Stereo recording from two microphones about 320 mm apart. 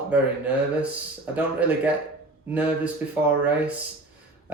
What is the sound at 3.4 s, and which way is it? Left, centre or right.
Speech, centre.